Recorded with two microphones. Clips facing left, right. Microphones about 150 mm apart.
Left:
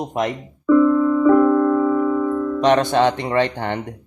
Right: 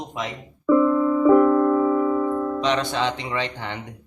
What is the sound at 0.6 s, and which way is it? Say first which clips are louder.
Music: left 3 dB; 15° right (ahead or behind).